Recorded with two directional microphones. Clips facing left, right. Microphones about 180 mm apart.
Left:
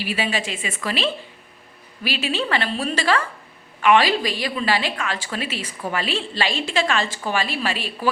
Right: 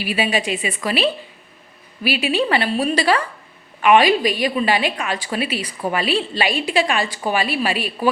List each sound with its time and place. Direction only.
0.0 s a woman's voice: 15° right (ahead or behind)